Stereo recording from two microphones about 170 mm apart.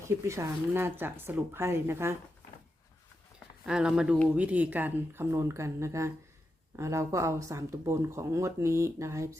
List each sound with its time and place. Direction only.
0.0 s speech: 15° right (ahead or behind)
3.7 s speech: 5° right (ahead or behind)